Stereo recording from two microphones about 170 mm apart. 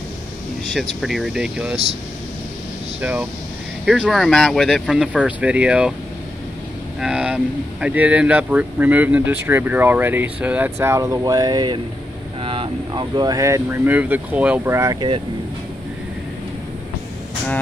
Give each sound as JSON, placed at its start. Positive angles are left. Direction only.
{"t": 1.0, "sound": "speech", "side_deg": 0}
{"t": 3.0, "sound": "speech", "side_deg": -10}
{"t": 7.0, "sound": "speech", "side_deg": -5}